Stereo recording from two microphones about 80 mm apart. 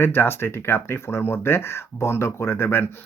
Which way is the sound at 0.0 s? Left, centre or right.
Left.